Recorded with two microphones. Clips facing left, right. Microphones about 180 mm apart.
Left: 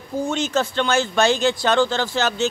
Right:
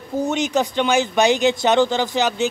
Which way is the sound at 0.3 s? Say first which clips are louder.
Right 1 dB; 15° right (ahead or behind).